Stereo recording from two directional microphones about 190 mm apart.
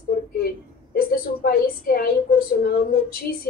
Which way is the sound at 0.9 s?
50° left (ahead or behind).